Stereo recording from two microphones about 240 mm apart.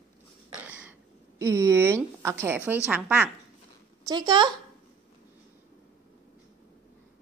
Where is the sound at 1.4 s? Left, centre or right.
Centre.